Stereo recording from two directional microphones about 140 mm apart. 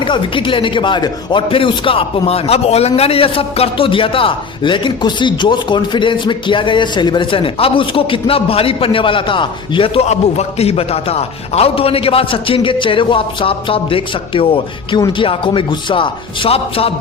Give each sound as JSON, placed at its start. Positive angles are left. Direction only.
{"t": 0.0, "sound": "speech", "side_deg": 35}